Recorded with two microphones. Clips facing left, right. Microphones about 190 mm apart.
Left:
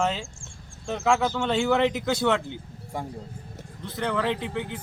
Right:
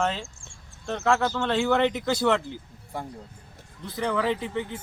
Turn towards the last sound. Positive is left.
turn(degrees=0)  # may be behind; listen again after turning